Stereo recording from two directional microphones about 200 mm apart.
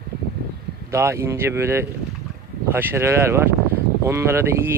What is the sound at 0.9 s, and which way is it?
Speech, 15° right (ahead or behind).